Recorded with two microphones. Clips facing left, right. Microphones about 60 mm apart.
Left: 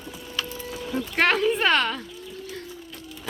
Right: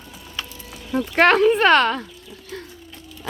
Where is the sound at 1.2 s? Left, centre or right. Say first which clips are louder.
Right 7 dB; right.